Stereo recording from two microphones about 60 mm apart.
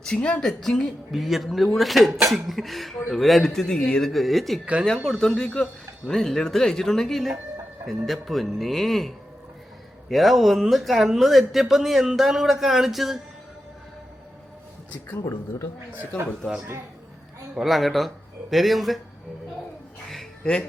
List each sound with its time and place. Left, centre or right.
0.0 s a man's voice: centre
4.1 s speech: centre
4.6 s speech: centre
5.0 s a man's voice: centre
17.5 s speech: centre
20.4 s speech: centre